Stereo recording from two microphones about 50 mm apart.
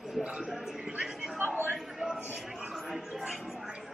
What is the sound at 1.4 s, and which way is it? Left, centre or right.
Speech, right.